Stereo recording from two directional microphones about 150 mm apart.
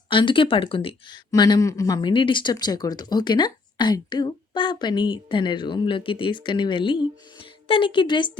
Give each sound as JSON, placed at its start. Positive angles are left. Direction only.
{"t": 0.1, "sound": "speech", "side_deg": 35}